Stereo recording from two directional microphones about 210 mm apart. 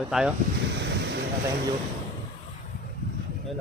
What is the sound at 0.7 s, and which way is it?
Wind, 55° right (ahead or behind).